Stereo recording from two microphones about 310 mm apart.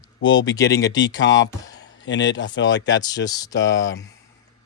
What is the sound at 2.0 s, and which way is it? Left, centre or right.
A man's voice, left.